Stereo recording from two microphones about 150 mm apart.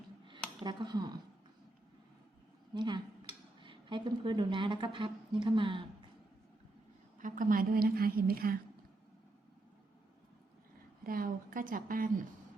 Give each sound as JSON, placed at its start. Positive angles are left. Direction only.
{"t": 0.6, "sound": "speech", "side_deg": -30}
{"t": 2.7, "sound": "a woman's voice", "side_deg": -30}
{"t": 7.2, "sound": "a woman's voice", "side_deg": -60}
{"t": 11.0, "sound": "a woman's voice", "side_deg": -70}